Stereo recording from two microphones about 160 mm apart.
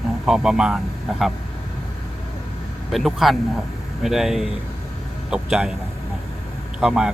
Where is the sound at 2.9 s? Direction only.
Centre (ahead or behind).